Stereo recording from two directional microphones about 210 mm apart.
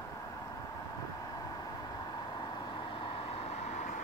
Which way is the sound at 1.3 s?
20° left (ahead or behind).